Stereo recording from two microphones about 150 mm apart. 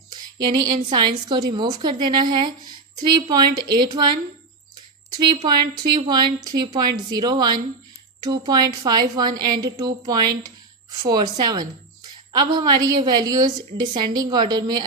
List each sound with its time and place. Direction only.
0.5 s a woman's voice: 30° right (ahead or behind)
5.3 s a woman's voice: 30° right (ahead or behind)